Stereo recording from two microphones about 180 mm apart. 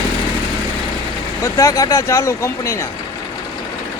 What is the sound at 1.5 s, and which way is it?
Speech, 20° left (ahead or behind).